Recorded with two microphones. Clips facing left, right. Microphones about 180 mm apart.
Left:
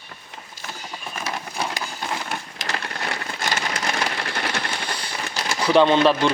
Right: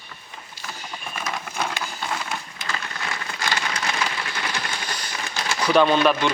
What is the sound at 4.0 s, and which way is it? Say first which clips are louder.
Sewing machine: left 2 dB; 55° left (ahead or behind).